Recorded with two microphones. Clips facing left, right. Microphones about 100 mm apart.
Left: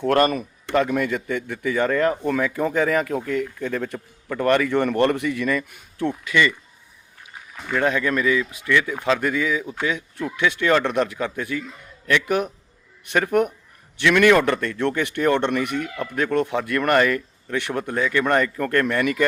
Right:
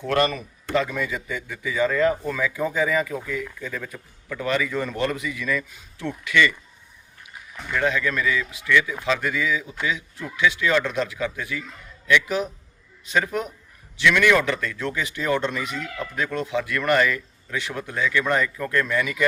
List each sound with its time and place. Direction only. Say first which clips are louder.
0.1 s a man's voice: left 3 dB; 45° left (ahead or behind)
7.7 s a man's voice: left 2 dB; 35° left (ahead or behind); by 13.5 s 60° left (ahead or behind)
14.0 s a man's voice: left 3 dB; 45° left (ahead or behind)
18.3 s a man's voice: left 3 dB; 50° left (ahead or behind)